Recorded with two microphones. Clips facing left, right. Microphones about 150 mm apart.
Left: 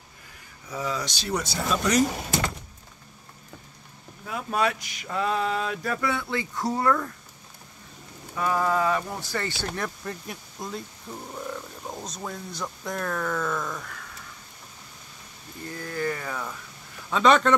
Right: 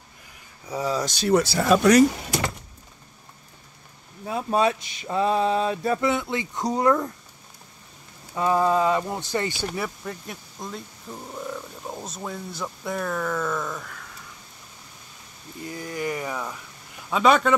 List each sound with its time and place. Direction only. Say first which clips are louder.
0.7 s speech: right 5 dB; 35° right (ahead or behind); by 2.0 s 70° right (ahead or behind)
4.3 s male singing: right 4 dB; 30° right (ahead or behind)
8.4 s male singing: right 4 dB; 25° right (ahead or behind)
9.8 s speech: right 1 dB; centre (ahead or behind)
15.6 s speech: even; 15° right (ahead or behind)